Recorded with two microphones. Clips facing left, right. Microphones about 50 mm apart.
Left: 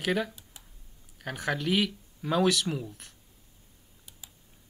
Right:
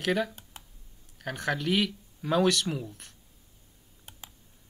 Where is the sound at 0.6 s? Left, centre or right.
Right.